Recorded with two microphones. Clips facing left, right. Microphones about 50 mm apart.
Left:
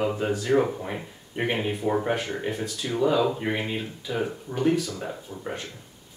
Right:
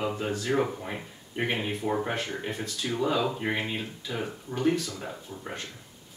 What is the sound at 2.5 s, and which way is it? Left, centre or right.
Speech, centre.